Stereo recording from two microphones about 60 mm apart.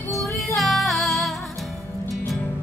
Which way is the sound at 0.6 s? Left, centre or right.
Centre.